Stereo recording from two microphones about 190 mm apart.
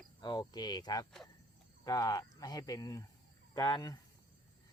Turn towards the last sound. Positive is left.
turn(degrees=20)  # may be behind; listen again after turning